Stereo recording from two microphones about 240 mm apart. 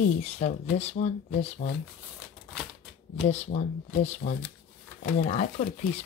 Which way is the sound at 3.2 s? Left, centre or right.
Left.